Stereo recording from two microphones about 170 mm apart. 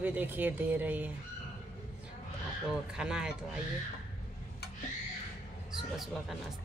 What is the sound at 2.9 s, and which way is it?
Speech, 5° right (ahead or behind).